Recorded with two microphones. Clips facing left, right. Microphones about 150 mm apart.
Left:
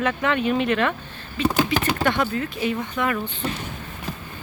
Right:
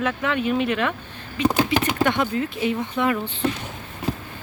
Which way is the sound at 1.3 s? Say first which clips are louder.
Right 1 dB; 15° right (ahead or behind).